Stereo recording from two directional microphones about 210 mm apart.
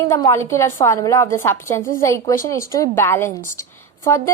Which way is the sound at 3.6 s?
15° left (ahead or behind).